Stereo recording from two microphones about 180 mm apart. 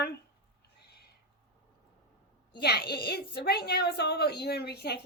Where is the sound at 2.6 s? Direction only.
60° left (ahead or behind).